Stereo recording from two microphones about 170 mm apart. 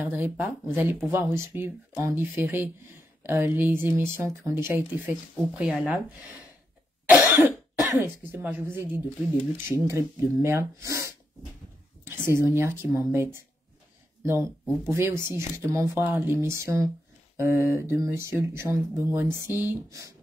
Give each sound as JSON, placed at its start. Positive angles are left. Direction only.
{"t": 0.0, "sound": "speech", "side_deg": -10}
{"t": 7.1, "sound": "cough", "side_deg": -10}
{"t": 8.0, "sound": "speech", "side_deg": -10}
{"t": 12.3, "sound": "speech", "side_deg": -15}
{"t": 14.9, "sound": "speech", "side_deg": -15}